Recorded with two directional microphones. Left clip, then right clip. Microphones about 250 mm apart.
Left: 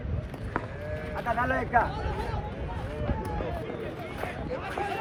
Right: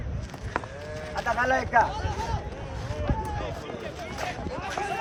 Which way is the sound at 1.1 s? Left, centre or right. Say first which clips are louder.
Right 4 dB; right.